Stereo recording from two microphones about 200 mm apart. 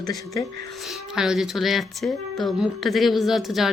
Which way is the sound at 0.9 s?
5° right (ahead or behind).